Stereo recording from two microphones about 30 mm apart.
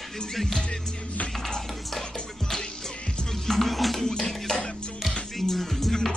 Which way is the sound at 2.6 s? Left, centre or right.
Left.